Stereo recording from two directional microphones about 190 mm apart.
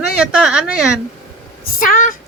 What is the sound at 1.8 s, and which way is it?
Speech, 45° left (ahead or behind).